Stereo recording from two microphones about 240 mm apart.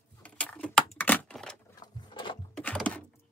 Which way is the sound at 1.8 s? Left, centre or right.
Centre.